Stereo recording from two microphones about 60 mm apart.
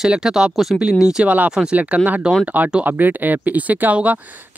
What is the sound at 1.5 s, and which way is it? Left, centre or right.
Speech, centre.